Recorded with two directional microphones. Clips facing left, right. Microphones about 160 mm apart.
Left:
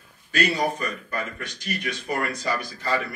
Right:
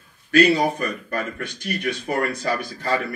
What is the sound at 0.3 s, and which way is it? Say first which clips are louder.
A man's voice: right 7 dB; 60° right (ahead or behind).